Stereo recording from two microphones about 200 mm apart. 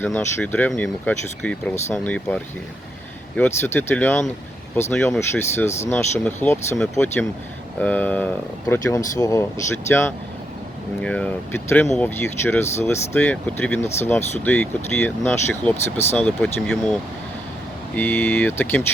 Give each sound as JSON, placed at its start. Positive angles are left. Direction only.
{"t": 0.0, "sound": "speech", "side_deg": 10}